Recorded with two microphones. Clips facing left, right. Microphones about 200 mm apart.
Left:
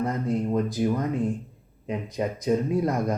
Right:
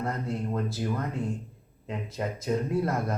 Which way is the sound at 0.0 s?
15° left (ahead or behind).